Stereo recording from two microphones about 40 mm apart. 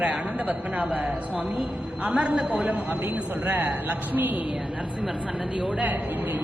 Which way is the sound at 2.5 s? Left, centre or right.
Right.